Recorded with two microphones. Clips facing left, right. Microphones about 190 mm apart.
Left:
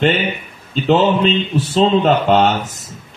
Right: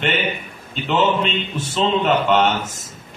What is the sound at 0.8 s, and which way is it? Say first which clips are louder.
Speech: left 5 dB; 40° left (ahead or behind).